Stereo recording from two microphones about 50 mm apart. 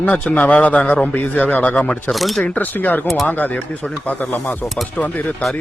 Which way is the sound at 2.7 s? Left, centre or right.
Left.